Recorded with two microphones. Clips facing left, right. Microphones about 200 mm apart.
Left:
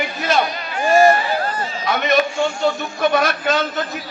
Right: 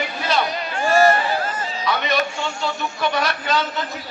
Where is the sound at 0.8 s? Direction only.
15° left (ahead or behind).